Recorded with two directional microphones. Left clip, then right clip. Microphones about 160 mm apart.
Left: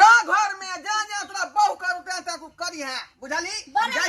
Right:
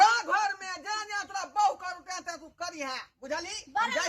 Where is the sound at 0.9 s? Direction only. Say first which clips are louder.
Left 8 dB; 25° right (ahead or behind).